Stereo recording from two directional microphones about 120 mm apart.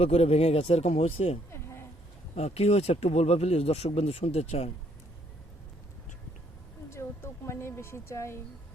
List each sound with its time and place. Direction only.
0.0 s speech: 60° left (ahead or behind)
6.9 s a woman's voice: 20° left (ahead or behind)